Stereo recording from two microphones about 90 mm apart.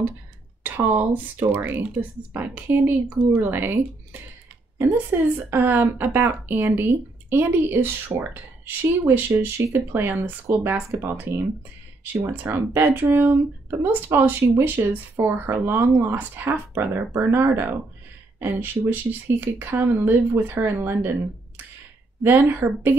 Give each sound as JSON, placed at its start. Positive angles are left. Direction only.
{"t": 0.7, "sound": "speech", "side_deg": -20}
{"t": 5.1, "sound": "speech", "side_deg": -25}
{"t": 22.2, "sound": "speech", "side_deg": -25}